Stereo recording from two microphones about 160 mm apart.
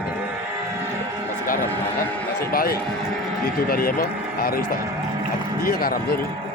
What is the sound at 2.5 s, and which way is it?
Speech, 70° left (ahead or behind).